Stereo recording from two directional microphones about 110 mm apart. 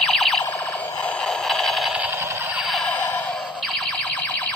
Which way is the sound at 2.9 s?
15° left (ahead or behind).